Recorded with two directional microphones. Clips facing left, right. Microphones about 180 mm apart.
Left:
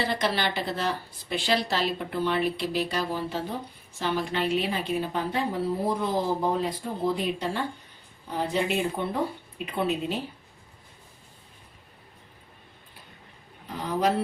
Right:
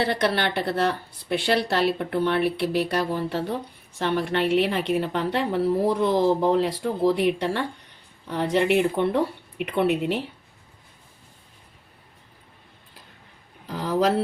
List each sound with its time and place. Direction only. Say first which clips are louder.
0.0 s a woman's voice: right 4 dB; 60° right (ahead or behind)
13.7 s speech: right 4 dB; 90° right